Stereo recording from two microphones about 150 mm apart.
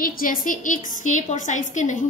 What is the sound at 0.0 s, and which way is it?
A woman's voice, 70° left (ahead or behind).